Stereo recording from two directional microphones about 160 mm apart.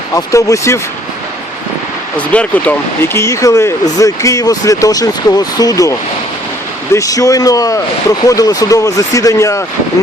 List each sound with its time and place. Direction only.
0.1 s speech: 20° left (ahead or behind)
2.1 s speech: 10° left (ahead or behind)